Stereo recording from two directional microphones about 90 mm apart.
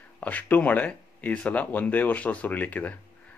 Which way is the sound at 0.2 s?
15° left (ahead or behind).